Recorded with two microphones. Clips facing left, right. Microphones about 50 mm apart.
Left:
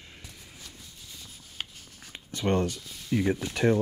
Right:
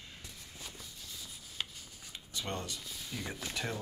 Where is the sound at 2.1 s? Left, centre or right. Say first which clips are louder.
Left 12 dB; left.